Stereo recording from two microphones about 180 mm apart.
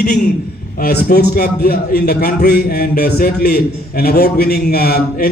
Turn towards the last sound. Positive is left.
turn(degrees=55)  # may be behind; listen again after turning